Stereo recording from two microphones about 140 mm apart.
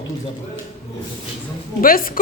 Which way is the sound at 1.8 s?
90° left.